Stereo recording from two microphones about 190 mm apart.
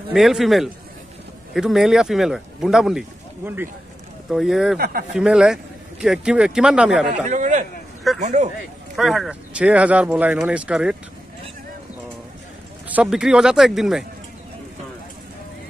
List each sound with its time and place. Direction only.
0.1 s speech: centre (ahead or behind)
4.7 s speech: 50° right (ahead or behind)
5.1 s speech: 5° right (ahead or behind)
7.2 s a man's voice: 40° right (ahead or behind)
8.9 s speech: centre (ahead or behind)
12.8 s speech: 5° right (ahead or behind)